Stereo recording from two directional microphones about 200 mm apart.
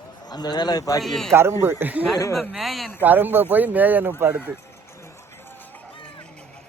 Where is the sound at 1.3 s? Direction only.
10° right (ahead or behind).